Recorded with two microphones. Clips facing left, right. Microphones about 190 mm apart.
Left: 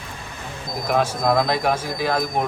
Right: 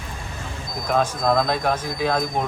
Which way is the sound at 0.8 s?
10° left (ahead or behind).